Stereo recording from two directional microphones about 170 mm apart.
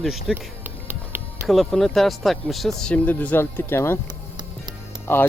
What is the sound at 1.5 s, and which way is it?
Speech, centre (ahead or behind).